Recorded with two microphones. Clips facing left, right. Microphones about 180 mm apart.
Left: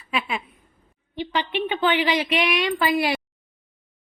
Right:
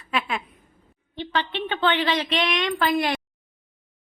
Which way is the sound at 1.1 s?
10° left (ahead or behind).